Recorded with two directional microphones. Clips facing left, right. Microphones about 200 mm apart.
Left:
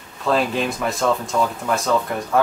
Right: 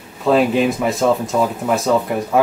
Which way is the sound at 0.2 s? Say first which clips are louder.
Right 6 dB; 5° right (ahead or behind).